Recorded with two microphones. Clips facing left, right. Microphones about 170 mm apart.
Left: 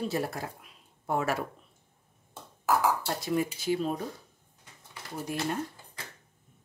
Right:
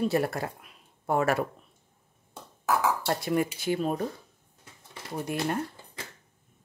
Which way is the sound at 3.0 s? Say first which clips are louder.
Right 3 dB; 60° right (ahead or behind).